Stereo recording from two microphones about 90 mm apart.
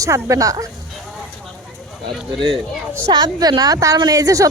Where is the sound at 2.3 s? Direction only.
65° right (ahead or behind).